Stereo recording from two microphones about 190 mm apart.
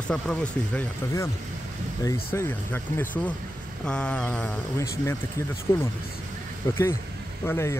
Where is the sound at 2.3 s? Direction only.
10° left (ahead or behind).